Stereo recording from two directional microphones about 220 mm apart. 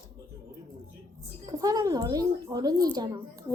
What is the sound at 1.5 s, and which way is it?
Child singing, 15° right (ahead or behind).